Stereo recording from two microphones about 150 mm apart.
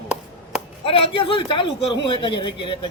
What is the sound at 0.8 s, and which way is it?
A man's voice, 35° left (ahead or behind).